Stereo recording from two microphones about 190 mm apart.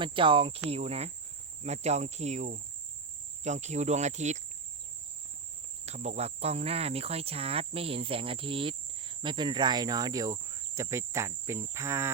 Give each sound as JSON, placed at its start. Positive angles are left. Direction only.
{"t": 0.0, "sound": "speech", "side_deg": -25}
{"t": 1.6, "sound": "cricket", "side_deg": -35}
{"t": 5.8, "sound": "speech", "side_deg": -35}